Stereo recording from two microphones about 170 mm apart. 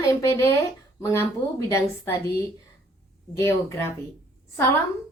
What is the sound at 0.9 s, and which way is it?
A woman's voice, 15° left (ahead or behind).